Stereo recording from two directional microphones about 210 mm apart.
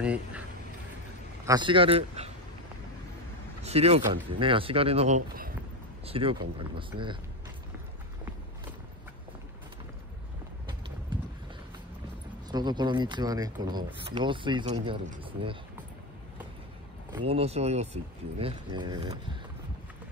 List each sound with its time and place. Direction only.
0.0 s speech: 5° right (ahead or behind)
1.4 s speech: 20° right (ahead or behind)
3.6 s speech: 30° right (ahead or behind)
6.0 s speech: 25° right (ahead or behind)
12.4 s speech: 20° right (ahead or behind)
17.3 s speech: 30° right (ahead or behind)